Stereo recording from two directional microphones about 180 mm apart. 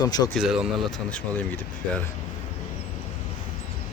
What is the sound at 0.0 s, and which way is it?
Speech, 20° left (ahead or behind).